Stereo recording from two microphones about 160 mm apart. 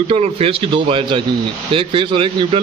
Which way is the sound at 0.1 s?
40° right (ahead or behind).